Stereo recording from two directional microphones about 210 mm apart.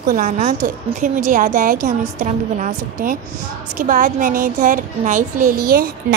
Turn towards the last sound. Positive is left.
turn(degrees=-45)  # may be behind; listen again after turning